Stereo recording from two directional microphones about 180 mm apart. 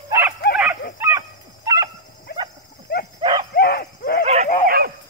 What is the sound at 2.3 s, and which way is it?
Dog, 60° left (ahead or behind).